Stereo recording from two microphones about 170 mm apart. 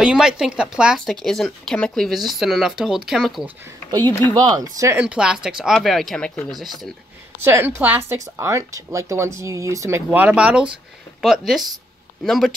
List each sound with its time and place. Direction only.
0.0 s speech: 5° right (ahead or behind)
4.3 s speech: 25° right (ahead or behind)
4.9 s speech: 5° right (ahead or behind)
7.4 s speech: 15° right (ahead or behind)